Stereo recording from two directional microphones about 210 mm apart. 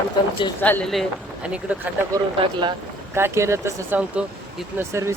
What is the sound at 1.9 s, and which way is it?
Speech, 10° right (ahead or behind).